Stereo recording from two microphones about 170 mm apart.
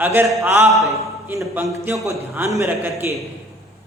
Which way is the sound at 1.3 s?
15° right (ahead or behind).